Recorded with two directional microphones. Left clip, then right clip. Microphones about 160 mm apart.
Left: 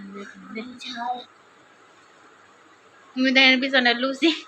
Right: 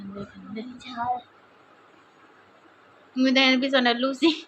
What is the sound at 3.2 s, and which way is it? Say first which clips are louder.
A woman's voice: left 3 dB; 5° right (ahead or behind).